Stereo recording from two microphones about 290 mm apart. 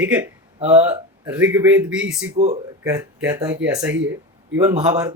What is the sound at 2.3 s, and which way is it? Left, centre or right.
Speech, right.